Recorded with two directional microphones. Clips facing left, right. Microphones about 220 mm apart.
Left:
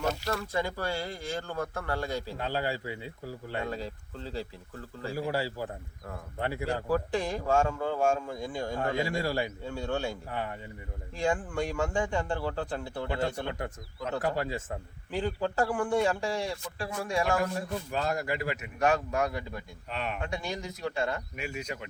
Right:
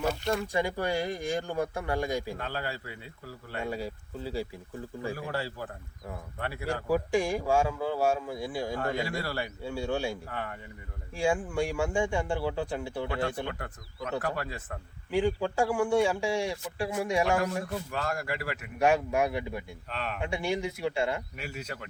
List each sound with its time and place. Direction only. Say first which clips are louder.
0.3 s speech: right 3 dB; 15° right (ahead or behind)
2.4 s a man's voice: left 4 dB; 15° left (ahead or behind)
3.6 s speech: right 4 dB; 10° right (ahead or behind)
5.1 s a man's voice: left 3 dB; 10° left (ahead or behind)
6.8 s speech: right 4 dB; 10° right (ahead or behind)
9.0 s a man's voice: left 3 dB; 15° left (ahead or behind)
9.6 s speech: right 1 dB; 10° right (ahead or behind)
10.2 s a man's voice: left 2 dB; 15° left (ahead or behind)
11.2 s speech: right 2 dB; 10° right (ahead or behind)
13.5 s a man's voice: left 3 dB; 25° left (ahead or behind)
15.1 s speech: right 3 dB; 10° right (ahead or behind)
17.9 s a man's voice: left 4 dB; 20° left (ahead or behind)
18.8 s speech: right 2 dB; 15° right (ahead or behind)
21.5 s a man's voice: left 1 dB; 10° left (ahead or behind)